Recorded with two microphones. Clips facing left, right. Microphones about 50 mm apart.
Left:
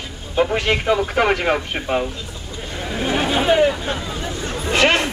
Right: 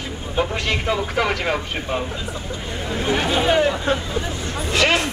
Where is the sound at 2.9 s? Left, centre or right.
Centre.